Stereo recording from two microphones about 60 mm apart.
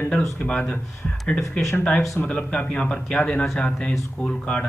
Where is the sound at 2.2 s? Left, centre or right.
Centre.